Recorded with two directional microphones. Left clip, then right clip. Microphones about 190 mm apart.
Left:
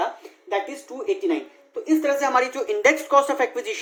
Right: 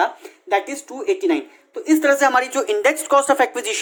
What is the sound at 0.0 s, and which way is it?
Speech, 50° right (ahead or behind).